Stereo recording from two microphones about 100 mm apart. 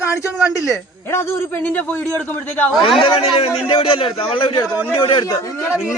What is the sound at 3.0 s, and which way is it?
A man's voice, 65° left (ahead or behind).